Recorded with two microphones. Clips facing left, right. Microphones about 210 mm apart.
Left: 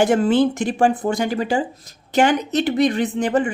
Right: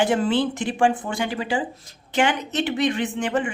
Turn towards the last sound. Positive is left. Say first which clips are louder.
# left 5 dB
turn(degrees=40)  # may be behind; listen again after turning